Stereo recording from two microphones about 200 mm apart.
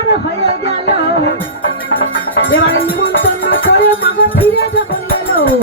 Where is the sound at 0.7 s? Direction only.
30° right (ahead or behind).